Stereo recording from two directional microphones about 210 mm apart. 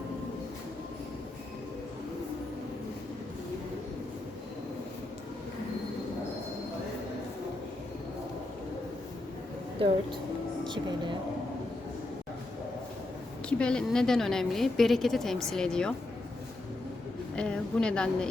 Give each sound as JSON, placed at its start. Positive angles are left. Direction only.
{"t": 9.8, "sound": "speech", "side_deg": -25}
{"t": 13.5, "sound": "a woman's voice", "side_deg": 5}
{"t": 17.3, "sound": "a woman's voice", "side_deg": 5}